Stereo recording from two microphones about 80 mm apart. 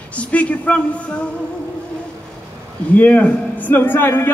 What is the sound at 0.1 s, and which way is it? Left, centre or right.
Speech, centre.